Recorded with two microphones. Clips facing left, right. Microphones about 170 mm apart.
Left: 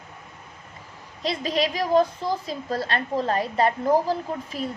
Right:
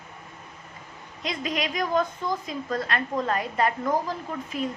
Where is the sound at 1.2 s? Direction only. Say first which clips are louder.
Left 5 dB; 30° left (ahead or behind).